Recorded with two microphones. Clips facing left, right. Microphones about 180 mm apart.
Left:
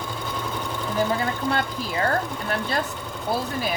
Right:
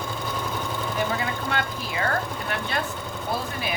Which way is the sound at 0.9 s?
35° left (ahead or behind).